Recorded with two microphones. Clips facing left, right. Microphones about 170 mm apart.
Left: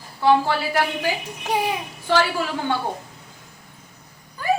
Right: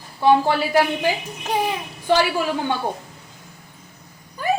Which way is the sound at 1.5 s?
10° left (ahead or behind).